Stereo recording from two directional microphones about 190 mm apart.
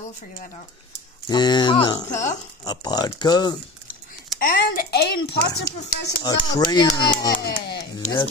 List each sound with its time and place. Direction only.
1.3 s speech: 20° left (ahead or behind)
2.0 s speech: 40° left (ahead or behind)
2.6 s speech: 20° left (ahead or behind)
4.4 s speech: 50° left (ahead or behind)
6.2 s speech: 20° left (ahead or behind)
7.4 s speech: 55° left (ahead or behind)